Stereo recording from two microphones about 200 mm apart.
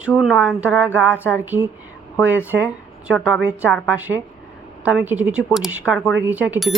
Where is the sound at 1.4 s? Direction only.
10° right (ahead or behind).